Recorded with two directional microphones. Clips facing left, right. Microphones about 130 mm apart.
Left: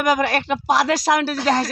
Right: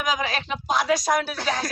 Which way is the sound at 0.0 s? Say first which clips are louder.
Left 7 dB; 65° left (ahead or behind).